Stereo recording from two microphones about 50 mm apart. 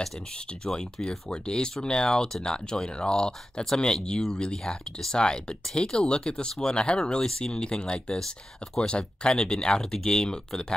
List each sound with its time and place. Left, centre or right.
0.7 s speech: centre